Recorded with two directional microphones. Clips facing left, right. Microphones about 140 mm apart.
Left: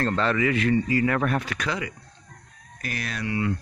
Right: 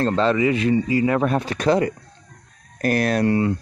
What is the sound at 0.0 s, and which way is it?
Speech, 20° right (ahead or behind).